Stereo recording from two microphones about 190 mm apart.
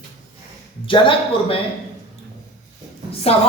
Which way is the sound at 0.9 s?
25° left (ahead or behind).